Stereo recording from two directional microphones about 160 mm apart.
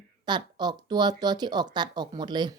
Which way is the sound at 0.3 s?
25° right (ahead or behind).